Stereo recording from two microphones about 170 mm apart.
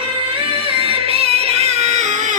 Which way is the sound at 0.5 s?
35° right (ahead or behind).